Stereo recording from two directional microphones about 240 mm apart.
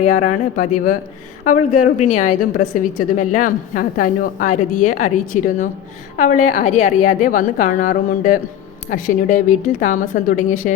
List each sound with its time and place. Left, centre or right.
0.0 s a woman's voice: left
2.0 s a woman's voice: left